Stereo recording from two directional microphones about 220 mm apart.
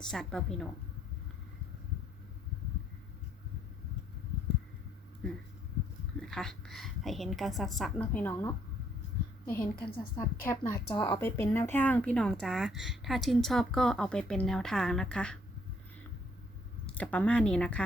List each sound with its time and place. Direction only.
0.0 s a woman's voice: 5° left (ahead or behind)
6.1 s a woman's voice: centre (ahead or behind)
9.9 s a woman's voice: 25° left (ahead or behind)
10.4 s a woman's voice: 10° left (ahead or behind)
11.3 s a woman's voice: 10° left (ahead or behind)
16.8 s a woman's voice: 5° left (ahead or behind)